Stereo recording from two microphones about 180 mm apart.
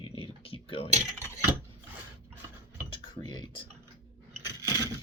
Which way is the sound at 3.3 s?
25° left (ahead or behind).